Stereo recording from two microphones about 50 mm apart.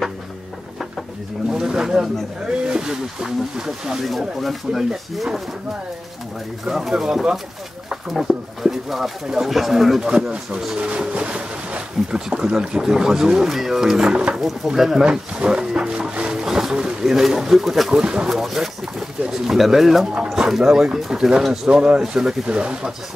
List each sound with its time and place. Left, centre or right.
1.5 s speech: centre
4.4 s speech: centre
6.6 s speech: centre
10.8 s speech: right
14.3 s speech: centre
15.0 s a sound: centre
18.2 s speech: centre